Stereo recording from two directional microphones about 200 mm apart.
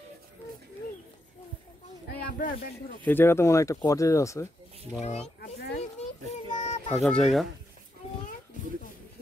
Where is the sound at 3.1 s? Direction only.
10° left (ahead or behind).